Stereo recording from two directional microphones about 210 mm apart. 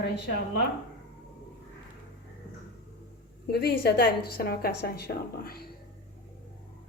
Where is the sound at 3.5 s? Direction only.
50° left (ahead or behind).